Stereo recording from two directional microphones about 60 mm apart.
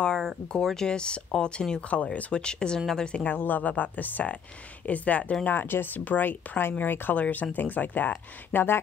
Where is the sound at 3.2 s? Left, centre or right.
Left.